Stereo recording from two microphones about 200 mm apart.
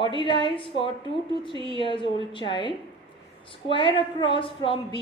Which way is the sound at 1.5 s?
25° right (ahead or behind).